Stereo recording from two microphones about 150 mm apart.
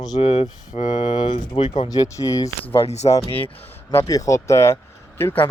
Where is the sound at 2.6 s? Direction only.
40° left (ahead or behind).